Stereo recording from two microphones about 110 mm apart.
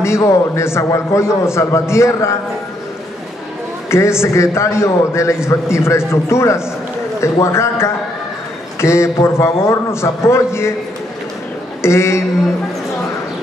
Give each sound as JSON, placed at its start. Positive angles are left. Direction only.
{"t": 0.0, "sound": "a man's voice", "side_deg": 25}
{"t": 3.9, "sound": "a man's voice", "side_deg": 25}
{"t": 11.8, "sound": "a man's voice", "side_deg": 25}